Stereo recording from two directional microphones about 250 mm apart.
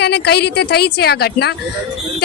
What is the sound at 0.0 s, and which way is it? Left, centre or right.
A woman's voice, left.